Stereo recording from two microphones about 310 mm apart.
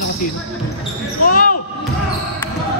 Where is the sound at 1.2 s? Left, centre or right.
Left.